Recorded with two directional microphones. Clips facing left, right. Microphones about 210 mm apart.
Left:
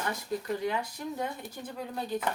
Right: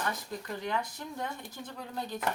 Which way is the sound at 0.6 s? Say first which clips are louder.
Left 3 dB; 10° left (ahead or behind).